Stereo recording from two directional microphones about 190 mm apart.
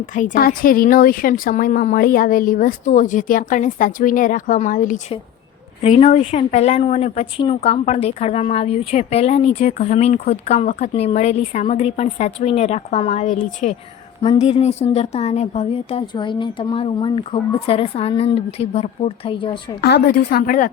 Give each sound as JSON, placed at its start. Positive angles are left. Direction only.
{"t": 0.1, "sound": "a woman's voice", "side_deg": 45}
{"t": 14.2, "sound": "speech", "side_deg": 30}
{"t": 19.8, "sound": "a woman's voice", "side_deg": 55}